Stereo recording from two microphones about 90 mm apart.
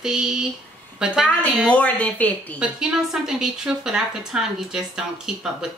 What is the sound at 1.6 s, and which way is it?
Speech, 15° left (ahead or behind).